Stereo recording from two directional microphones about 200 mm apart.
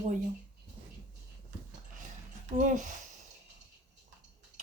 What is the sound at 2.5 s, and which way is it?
Speech, 40° right (ahead or behind).